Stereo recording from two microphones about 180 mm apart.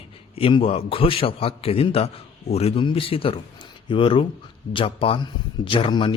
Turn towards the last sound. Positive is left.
turn(degrees=25)  # may be behind; listen again after turning